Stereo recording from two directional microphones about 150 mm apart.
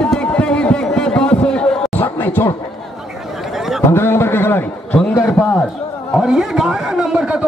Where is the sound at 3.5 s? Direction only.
Centre (ahead or behind).